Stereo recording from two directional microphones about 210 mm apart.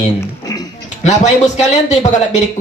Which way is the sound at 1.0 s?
35° left (ahead or behind).